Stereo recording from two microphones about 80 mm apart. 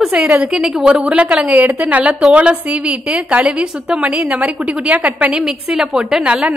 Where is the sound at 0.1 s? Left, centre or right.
Centre.